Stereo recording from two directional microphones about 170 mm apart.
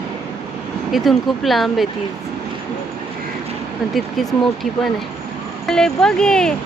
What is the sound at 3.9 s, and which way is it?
Speech, centre (ahead or behind).